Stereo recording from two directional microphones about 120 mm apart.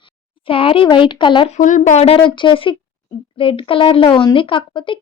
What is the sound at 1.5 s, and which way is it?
Speech, 90° left.